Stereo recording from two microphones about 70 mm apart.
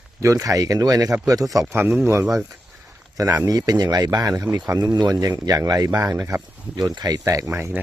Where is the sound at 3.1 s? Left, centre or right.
Right.